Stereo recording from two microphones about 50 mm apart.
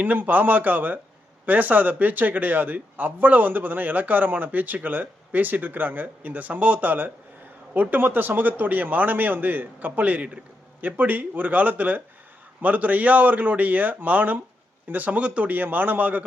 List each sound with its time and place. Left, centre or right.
0.0 s speech: right
10.8 s speech: right